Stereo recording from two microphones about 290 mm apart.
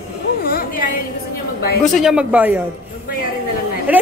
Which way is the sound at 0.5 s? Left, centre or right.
Left.